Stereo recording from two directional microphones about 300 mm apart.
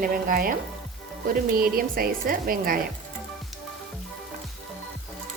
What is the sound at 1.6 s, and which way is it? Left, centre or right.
A woman's voice, right.